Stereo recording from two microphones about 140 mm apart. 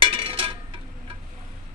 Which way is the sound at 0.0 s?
40° right (ahead or behind).